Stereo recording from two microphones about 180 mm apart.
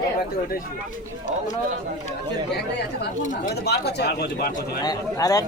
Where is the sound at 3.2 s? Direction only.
45° left (ahead or behind).